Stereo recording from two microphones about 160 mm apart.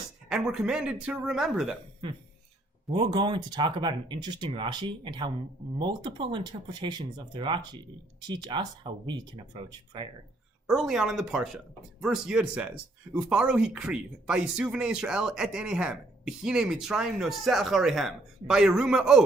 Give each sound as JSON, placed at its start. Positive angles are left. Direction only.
{"t": 0.3, "sound": "speech", "side_deg": -5}
{"t": 2.9, "sound": "speech", "side_deg": -30}
{"t": 10.8, "sound": "speech", "side_deg": -5}